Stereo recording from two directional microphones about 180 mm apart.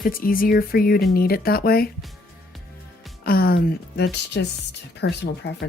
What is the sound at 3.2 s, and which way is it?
Speech, 55° left (ahead or behind).